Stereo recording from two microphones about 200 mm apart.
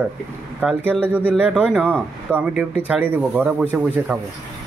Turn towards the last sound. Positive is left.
turn(degrees=-5)  # may be behind; listen again after turning